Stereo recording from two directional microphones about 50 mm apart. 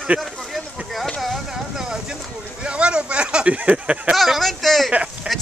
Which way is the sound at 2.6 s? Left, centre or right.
Right.